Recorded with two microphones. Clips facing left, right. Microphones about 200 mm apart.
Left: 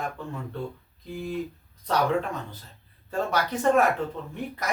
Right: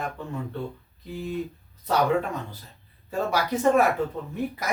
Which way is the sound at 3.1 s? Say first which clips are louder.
Right 1 dB; 10° right (ahead or behind).